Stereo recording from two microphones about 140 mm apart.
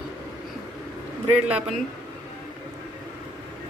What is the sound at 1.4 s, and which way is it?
Speech, 10° right (ahead or behind).